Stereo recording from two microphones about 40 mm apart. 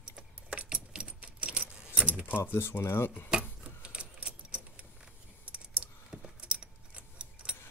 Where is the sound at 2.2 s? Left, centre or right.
Left.